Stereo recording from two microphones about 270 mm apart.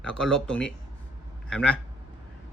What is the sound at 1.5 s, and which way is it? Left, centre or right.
Speech, centre.